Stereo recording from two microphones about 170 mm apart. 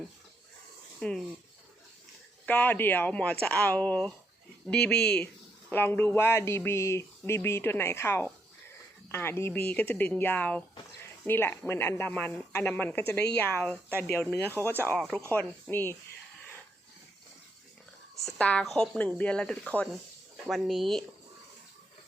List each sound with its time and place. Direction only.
0.9 s speech: 5° left (ahead or behind)
2.5 s speech: 10° left (ahead or behind)
18.3 s speech: 5° left (ahead or behind)